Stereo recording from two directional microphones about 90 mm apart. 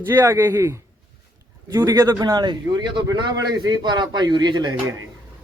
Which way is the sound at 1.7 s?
40° right (ahead or behind).